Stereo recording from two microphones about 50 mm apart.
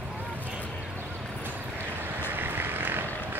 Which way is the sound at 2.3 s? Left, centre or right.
Right.